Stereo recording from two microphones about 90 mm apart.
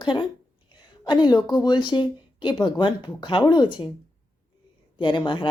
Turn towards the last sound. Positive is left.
turn(degrees=60)  # may be behind; listen again after turning